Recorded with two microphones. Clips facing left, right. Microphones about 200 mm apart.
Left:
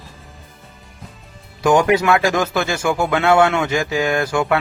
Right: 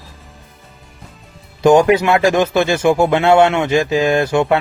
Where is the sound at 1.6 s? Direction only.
25° right (ahead or behind).